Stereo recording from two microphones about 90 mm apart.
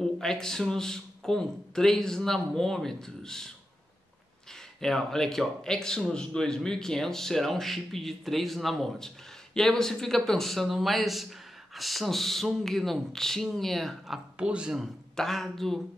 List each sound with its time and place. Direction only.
0.0 s a man's voice: 5° left (ahead or behind)
4.7 s a man's voice: 5° left (ahead or behind)
15.1 s a man's voice: 5° left (ahead or behind)